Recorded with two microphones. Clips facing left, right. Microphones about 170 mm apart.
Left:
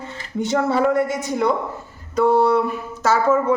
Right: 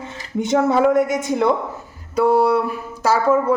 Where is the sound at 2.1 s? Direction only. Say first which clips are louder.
Even; 10° right (ahead or behind).